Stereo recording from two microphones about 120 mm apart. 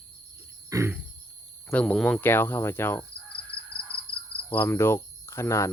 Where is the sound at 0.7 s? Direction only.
25° right (ahead or behind).